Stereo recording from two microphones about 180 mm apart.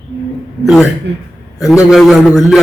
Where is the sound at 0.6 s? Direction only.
Centre (ahead or behind).